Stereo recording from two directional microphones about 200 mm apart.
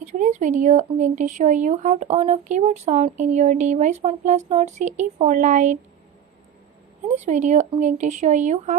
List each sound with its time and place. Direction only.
0.0 s speech: 35° right (ahead or behind)
7.2 s speech: 35° right (ahead or behind)